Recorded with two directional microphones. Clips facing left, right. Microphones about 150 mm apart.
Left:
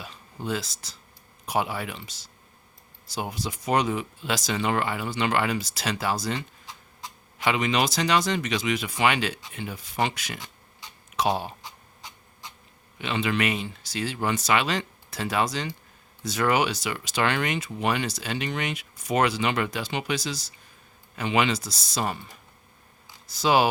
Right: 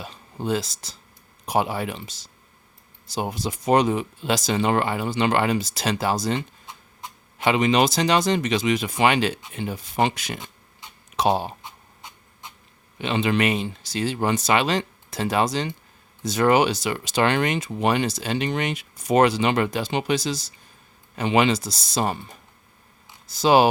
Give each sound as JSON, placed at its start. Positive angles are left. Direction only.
{"t": 0.0, "sound": "speech", "side_deg": -30}
{"t": 3.2, "sound": "speech", "side_deg": -25}
{"t": 23.4, "sound": "speech", "side_deg": -30}